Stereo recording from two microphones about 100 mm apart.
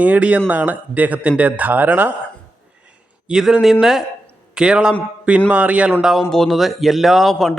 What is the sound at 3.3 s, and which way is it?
A man's voice, 5° right (ahead or behind).